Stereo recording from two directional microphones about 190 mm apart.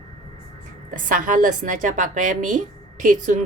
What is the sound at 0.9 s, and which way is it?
A woman's voice, 45° right (ahead or behind).